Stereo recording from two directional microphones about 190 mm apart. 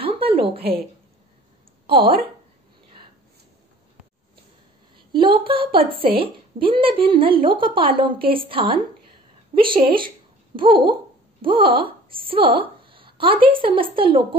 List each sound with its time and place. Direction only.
0.0 s a sound: 30° right (ahead or behind)
1.9 s a woman's voice: 30° right (ahead or behind)
5.2 s a woman's voice: 25° right (ahead or behind)